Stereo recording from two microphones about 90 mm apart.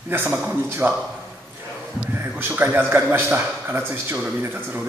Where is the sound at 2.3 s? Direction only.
25° right (ahead or behind).